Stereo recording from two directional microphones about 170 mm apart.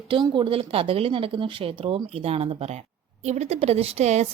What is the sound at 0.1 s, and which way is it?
A woman's voice, 30° right (ahead or behind).